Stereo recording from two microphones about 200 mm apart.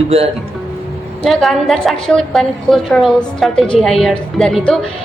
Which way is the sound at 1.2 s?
Centre (ahead or behind).